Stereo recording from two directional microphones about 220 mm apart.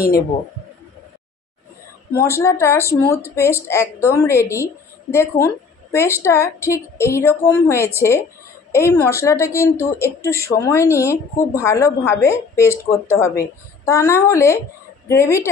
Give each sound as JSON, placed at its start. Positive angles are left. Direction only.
{"t": 2.2, "sound": "speech", "side_deg": 10}